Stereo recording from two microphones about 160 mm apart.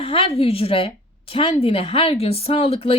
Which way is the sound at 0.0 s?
35° left (ahead or behind).